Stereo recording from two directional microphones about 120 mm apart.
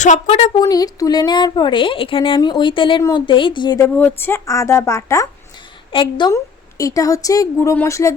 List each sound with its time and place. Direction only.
0.0 s a woman's voice: 75° left (ahead or behind); by 0.5 s 60° left (ahead or behind)
0.6 s a woman's voice: 30° left (ahead or behind)
3.9 s a woman's voice: 15° left (ahead or behind)
5.9 s a woman's voice: 45° left (ahead or behind)
6.3 s a woman's voice: 30° left (ahead or behind)